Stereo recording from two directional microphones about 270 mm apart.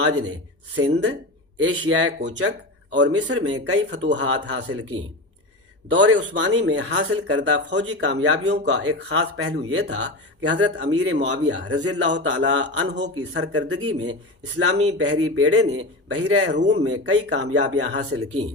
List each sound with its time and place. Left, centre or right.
0.0 s a man's voice: right
1.6 s a man's voice: right
5.9 s a man's voice: right
7.9 s a man's voice: right
8.5 s a man's voice: right
9.8 s speech: right
10.8 s a man's voice: right